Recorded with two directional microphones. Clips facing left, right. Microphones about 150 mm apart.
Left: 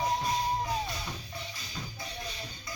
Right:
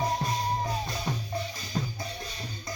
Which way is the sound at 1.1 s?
40° right (ahead or behind).